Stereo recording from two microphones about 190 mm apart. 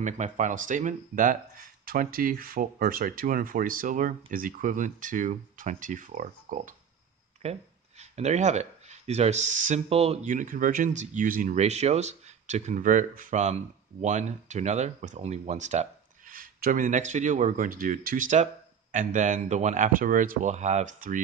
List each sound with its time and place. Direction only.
0.0 s speech: 40° right (ahead or behind)
8.0 s speech: 35° right (ahead or behind)